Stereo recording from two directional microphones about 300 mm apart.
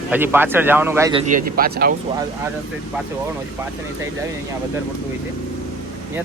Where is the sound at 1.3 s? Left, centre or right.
Right.